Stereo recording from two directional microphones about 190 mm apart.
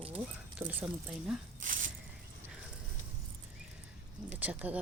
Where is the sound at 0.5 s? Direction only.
10° right (ahead or behind).